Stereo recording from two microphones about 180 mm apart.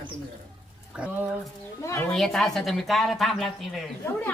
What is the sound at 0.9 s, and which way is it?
Speech, 5° right (ahead or behind).